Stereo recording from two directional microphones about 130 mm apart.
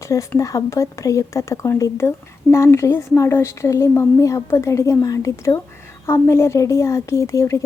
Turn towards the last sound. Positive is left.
turn(degrees=25)  # may be behind; listen again after turning